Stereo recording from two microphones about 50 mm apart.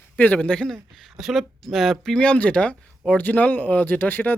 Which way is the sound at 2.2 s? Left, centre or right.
Left.